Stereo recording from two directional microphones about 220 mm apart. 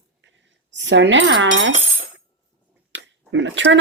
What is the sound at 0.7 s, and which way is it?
Speech, 55° right (ahead or behind).